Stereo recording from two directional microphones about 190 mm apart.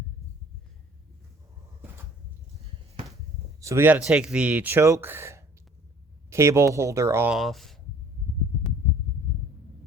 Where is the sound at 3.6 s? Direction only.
10° right (ahead or behind).